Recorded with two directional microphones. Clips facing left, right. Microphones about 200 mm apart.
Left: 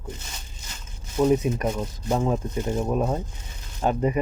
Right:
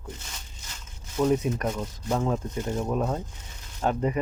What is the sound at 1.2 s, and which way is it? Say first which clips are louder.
Speech: left 3 dB; 10° left (ahead or behind).